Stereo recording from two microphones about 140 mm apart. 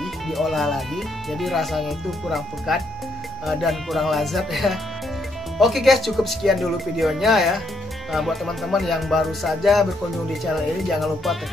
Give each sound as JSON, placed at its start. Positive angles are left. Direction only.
{"t": 0.0, "sound": "speech", "side_deg": 0}